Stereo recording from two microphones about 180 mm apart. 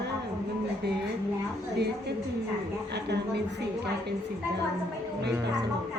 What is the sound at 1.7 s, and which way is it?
Speech, 65° right (ahead or behind).